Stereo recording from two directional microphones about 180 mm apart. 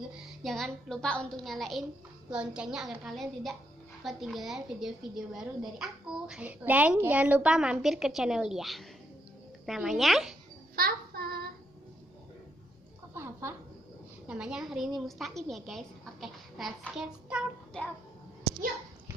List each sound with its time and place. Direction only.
0.4 s a woman's voice: centre (ahead or behind)
10.8 s child singing: 55° right (ahead or behind)
13.1 s a sound: 15° right (ahead or behind)
14.3 s a woman's voice: 5° right (ahead or behind)